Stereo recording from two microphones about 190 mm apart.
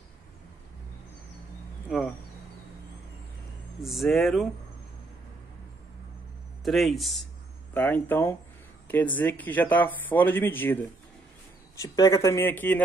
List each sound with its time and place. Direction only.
3.8 s speech: centre (ahead or behind)
6.6 s speech: centre (ahead or behind)